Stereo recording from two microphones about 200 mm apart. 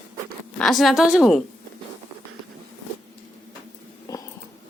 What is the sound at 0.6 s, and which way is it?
Speech, centre (ahead or behind).